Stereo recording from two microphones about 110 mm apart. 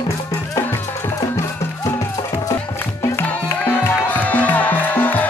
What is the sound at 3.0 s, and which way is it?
Music, 20° left (ahead or behind).